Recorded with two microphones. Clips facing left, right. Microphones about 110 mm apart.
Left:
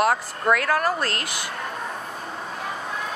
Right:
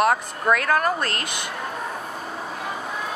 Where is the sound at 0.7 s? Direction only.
25° right (ahead or behind).